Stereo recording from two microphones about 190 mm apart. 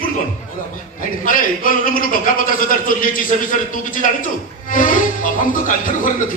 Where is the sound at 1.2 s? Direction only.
45° left (ahead or behind).